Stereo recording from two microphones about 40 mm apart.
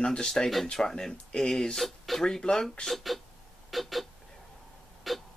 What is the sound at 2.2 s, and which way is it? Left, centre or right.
Speech, centre.